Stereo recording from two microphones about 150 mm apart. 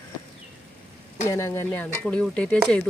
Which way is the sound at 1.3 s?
20° left (ahead or behind).